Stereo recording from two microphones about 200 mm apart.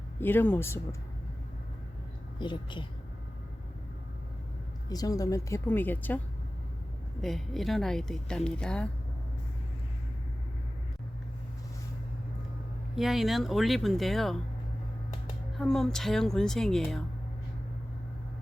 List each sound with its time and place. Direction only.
0.2 s speech: 10° left (ahead or behind)
2.4 s speech: 25° left (ahead or behind)
4.9 s speech: 20° left (ahead or behind)
7.2 s a woman's voice: centre (ahead or behind)
13.0 s a woman's voice: centre (ahead or behind)
15.5 s a woman's voice: centre (ahead or behind)